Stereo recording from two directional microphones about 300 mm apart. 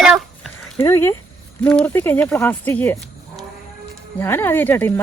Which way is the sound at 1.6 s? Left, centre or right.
Centre.